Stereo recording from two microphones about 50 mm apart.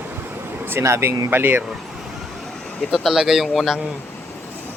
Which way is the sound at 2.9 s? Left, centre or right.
Centre.